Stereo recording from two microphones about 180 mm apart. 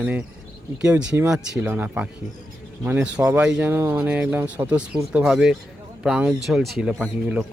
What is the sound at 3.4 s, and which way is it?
Speech, 5° right (ahead or behind).